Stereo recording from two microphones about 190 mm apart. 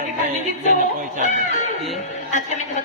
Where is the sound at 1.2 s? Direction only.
40° left (ahead or behind).